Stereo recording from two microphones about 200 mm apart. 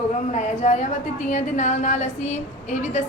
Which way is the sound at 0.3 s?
35° left (ahead or behind).